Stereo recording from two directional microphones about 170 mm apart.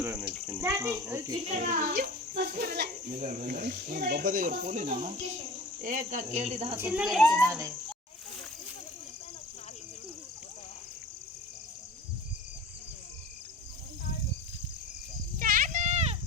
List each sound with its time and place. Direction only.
0.0 s speech: 10° right (ahead or behind)
1.5 s speech: 45° right (ahead or behind)
2.3 s speech: 65° right (ahead or behind)
4.0 s speech: 60° right (ahead or behind); by 6.7 s 35° right (ahead or behind)
6.7 s speech: 10° right (ahead or behind)
7.4 s speech: 15° right (ahead or behind)
15.4 s a sound: 55° right (ahead or behind)